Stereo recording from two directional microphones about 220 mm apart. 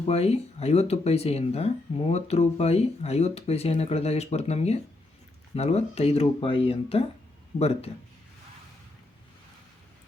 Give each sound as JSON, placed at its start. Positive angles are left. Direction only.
{"t": 0.1, "sound": "speech", "side_deg": 30}